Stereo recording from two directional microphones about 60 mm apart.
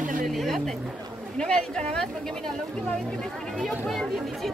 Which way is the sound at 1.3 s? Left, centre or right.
Centre.